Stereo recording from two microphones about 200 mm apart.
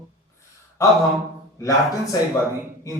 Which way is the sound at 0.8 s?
15° left (ahead or behind).